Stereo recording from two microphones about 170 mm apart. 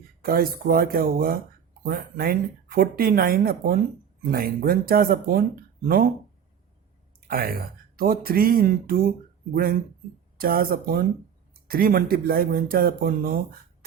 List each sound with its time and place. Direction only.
0.2 s speech: 60° right (ahead or behind)
7.2 s speech: 60° right (ahead or behind)